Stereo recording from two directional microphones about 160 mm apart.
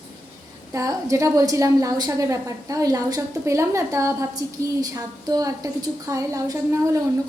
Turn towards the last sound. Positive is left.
turn(degrees=-20)  # may be behind; listen again after turning